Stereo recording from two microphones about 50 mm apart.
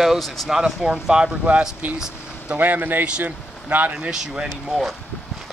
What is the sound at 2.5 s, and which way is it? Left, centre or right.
A man's voice, right.